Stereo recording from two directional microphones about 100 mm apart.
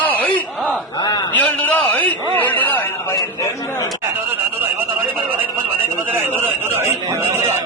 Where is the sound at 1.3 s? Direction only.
15° left (ahead or behind).